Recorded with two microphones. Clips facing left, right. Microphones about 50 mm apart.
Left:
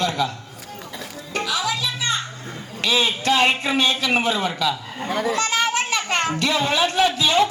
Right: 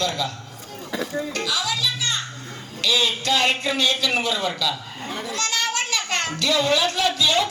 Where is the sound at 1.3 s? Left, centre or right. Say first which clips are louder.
Left 5 dB; left.